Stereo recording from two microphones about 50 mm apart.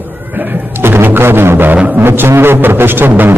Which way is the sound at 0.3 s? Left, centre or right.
Right.